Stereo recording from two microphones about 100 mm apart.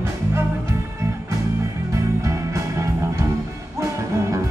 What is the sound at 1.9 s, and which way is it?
Music, 30° right (ahead or behind).